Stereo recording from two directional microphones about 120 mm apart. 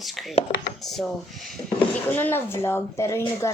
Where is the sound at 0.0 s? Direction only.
Centre (ahead or behind).